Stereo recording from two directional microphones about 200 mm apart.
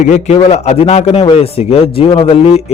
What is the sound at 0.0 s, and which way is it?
A man's voice, 35° left (ahead or behind).